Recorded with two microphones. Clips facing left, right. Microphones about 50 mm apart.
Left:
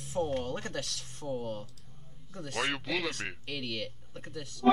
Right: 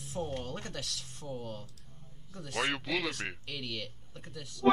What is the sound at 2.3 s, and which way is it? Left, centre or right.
Speech, centre.